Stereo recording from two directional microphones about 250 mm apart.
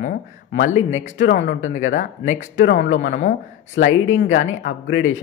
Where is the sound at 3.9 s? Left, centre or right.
Left.